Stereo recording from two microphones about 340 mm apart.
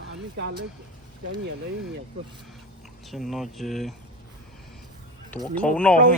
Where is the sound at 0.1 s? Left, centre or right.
Right.